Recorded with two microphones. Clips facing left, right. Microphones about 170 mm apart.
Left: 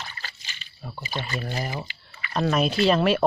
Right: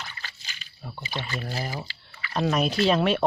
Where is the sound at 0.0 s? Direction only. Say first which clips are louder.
Left 1 dB; 35° left (ahead or behind).